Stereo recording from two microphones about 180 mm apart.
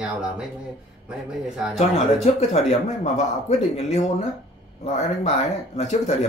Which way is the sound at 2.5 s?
35° left (ahead or behind).